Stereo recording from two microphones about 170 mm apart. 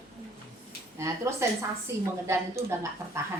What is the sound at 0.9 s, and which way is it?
Speech, 15° right (ahead or behind).